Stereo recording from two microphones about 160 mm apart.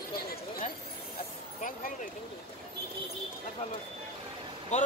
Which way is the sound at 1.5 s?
55° left (ahead or behind).